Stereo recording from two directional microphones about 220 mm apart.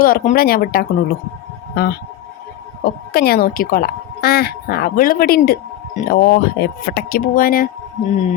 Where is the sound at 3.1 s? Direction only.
45° left (ahead or behind).